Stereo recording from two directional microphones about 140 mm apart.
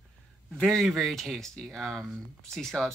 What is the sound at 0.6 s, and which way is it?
Speech, 5° left (ahead or behind).